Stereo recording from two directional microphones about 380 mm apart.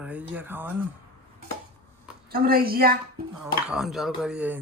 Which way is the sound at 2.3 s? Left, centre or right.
Right.